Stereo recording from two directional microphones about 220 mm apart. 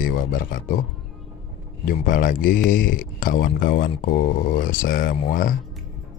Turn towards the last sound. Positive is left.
turn(degrees=40)  # may be behind; listen again after turning